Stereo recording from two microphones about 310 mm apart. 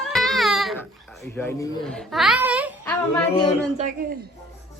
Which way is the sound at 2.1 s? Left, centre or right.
Centre.